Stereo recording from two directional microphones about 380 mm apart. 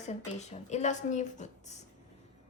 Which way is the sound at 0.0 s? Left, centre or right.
Centre.